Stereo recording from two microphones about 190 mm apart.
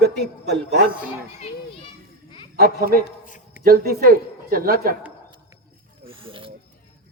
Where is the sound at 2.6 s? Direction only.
50° right (ahead or behind).